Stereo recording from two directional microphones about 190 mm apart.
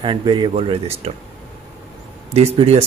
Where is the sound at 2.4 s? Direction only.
30° right (ahead or behind).